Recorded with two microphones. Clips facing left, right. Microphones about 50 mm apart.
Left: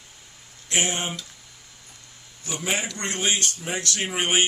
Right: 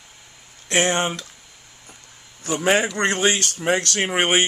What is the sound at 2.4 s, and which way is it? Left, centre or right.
Speech, right.